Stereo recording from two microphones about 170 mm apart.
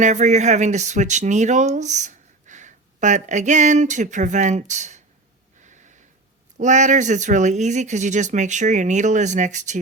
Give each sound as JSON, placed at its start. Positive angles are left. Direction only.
{"t": 0.0, "sound": "speech", "side_deg": -45}
{"t": 5.6, "sound": "snort", "side_deg": -45}
{"t": 6.6, "sound": "speech", "side_deg": -45}